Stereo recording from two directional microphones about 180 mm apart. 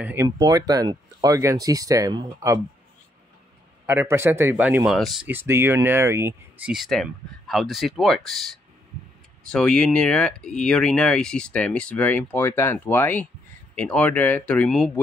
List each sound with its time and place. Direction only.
0.0 s speech: 15° right (ahead or behind)
3.8 s speech: 15° right (ahead or behind)
5.3 s speech: 10° right (ahead or behind)
6.7 s speech: centre (ahead or behind)
9.5 s speech: 5° left (ahead or behind)